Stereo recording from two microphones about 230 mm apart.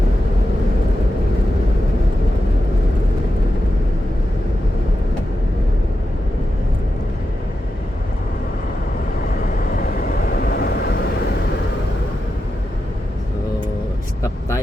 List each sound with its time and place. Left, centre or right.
9.7 s vehicle: left